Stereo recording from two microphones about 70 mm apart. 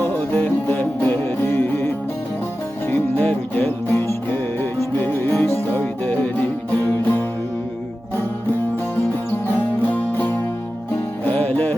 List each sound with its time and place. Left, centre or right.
0.0 s music: left
9.3 s music: left